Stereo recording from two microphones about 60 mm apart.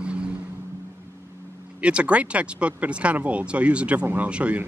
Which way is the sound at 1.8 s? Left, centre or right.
Right.